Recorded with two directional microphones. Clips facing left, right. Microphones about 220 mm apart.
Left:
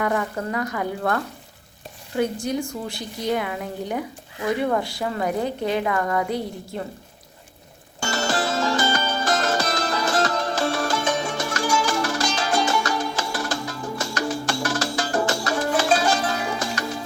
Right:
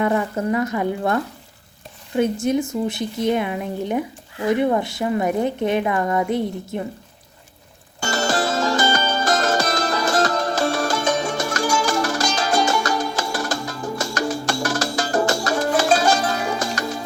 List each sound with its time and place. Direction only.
0.0 s a woman's voice: 25° right (ahead or behind)
8.1 s music: 45° right (ahead or behind)